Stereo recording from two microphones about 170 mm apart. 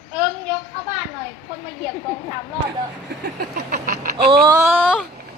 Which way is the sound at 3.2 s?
65° right (ahead or behind).